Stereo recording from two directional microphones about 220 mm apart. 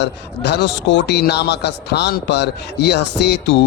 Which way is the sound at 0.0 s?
50° left (ahead or behind).